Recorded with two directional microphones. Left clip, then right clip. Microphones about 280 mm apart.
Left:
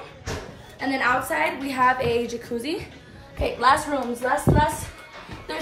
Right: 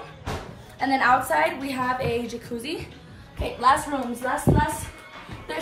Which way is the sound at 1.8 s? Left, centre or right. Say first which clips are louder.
Left 6 dB; left.